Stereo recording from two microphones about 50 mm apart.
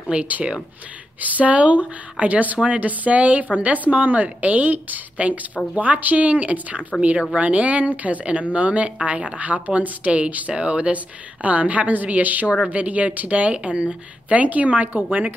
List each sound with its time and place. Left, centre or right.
0.1 s a woman's voice: right